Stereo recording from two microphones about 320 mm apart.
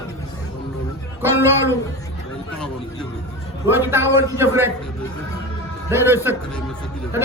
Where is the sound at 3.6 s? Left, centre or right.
Centre.